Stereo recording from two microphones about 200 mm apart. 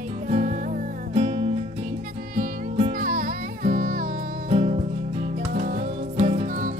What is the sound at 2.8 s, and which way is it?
Music, 40° right (ahead or behind).